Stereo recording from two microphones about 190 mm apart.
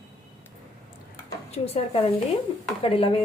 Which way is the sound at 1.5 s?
30° left (ahead or behind).